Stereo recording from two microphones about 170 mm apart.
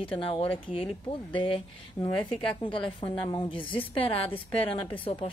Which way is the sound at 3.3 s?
25° left (ahead or behind).